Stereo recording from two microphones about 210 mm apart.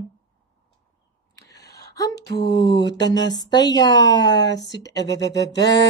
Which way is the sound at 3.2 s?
60° left (ahead or behind).